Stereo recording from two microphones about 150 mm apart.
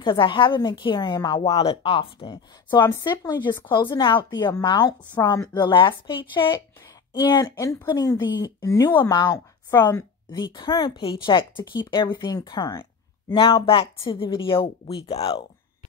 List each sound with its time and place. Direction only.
0.0 s a woman's voice: 30° left (ahead or behind)